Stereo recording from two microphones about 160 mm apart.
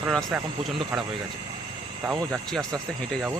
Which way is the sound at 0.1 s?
Centre (ahead or behind).